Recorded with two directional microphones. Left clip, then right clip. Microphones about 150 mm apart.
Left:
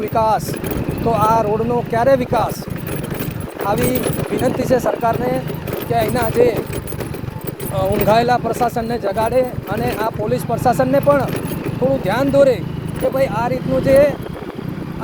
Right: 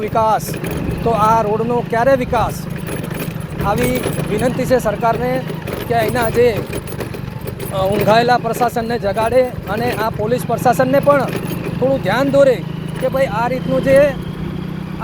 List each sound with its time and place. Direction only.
0.1 s speech: 5° right (ahead or behind)
4.4 s speech: centre (ahead or behind)
7.8 s speech: 5° left (ahead or behind)